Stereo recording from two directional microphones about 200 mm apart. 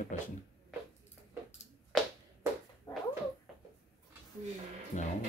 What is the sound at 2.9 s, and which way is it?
Cat, 15° left (ahead or behind).